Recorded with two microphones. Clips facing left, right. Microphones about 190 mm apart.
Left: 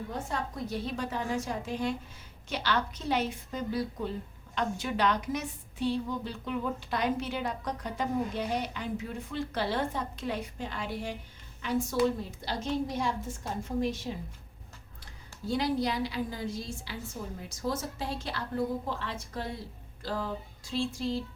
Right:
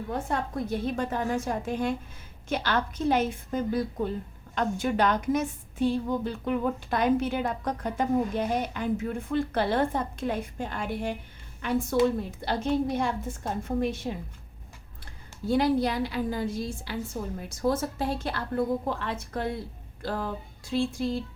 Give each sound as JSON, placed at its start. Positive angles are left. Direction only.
{"t": 0.1, "sound": "a woman's voice", "side_deg": -55}
{"t": 15.4, "sound": "a woman's voice", "side_deg": -55}